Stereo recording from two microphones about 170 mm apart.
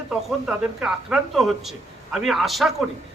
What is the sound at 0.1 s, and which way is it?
A man's voice, 5° right (ahead or behind).